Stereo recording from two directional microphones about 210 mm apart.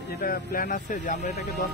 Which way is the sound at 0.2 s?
45° left (ahead or behind).